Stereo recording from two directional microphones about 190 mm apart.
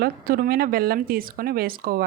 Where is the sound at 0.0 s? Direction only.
50° right (ahead or behind).